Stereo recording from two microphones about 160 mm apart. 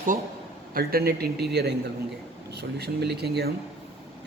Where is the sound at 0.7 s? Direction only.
70° right (ahead or behind).